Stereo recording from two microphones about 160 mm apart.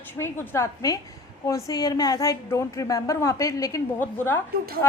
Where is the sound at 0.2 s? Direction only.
15° left (ahead or behind).